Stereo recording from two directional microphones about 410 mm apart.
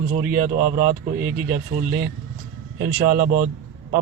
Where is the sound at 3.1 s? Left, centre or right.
Centre.